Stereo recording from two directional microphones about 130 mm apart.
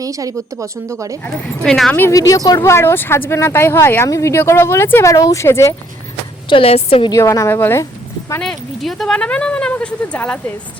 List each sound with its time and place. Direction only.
0.0 s speech: 25° right (ahead or behind)
1.2 s speech: 5° left (ahead or behind)
2.0 s speech: 25° left (ahead or behind)
6.5 s a woman's voice: 45° left (ahead or behind)
7.1 s speech: 20° left (ahead or behind)
8.4 s speech: 5° left (ahead or behind)